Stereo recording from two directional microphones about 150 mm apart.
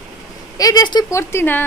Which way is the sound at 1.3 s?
15° left (ahead or behind).